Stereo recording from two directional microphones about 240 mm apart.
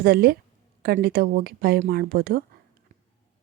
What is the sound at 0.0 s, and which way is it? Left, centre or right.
Speech, right.